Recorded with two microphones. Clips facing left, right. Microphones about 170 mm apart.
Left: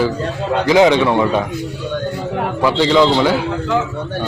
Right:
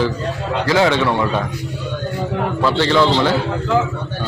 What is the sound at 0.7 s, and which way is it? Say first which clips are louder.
Speech: left 4 dB; 15° left (ahead or behind).